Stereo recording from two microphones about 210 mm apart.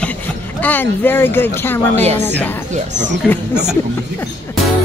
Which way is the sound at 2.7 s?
35° right (ahead or behind).